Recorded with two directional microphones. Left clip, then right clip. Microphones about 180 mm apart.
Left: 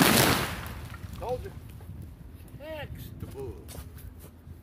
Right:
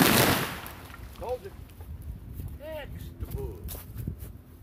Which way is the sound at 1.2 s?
40° left (ahead or behind).